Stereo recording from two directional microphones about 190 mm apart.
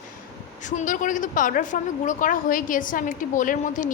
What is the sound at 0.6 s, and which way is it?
A woman's voice, 40° left (ahead or behind).